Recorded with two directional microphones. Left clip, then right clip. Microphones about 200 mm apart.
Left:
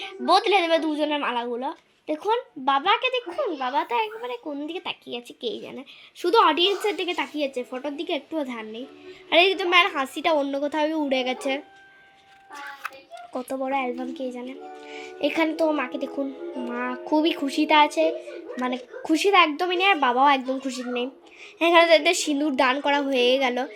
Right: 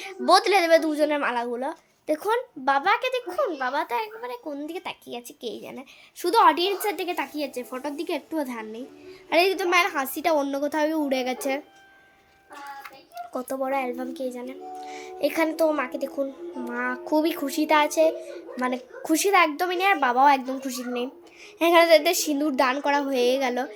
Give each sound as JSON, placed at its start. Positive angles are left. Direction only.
{"t": 0.0, "sound": "a woman's voice", "side_deg": -45}
{"t": 0.8, "sound": "speech", "side_deg": -10}
{"t": 2.6, "sound": "a woman's voice", "side_deg": 5}
{"t": 13.3, "sound": "a woman's voice", "side_deg": 5}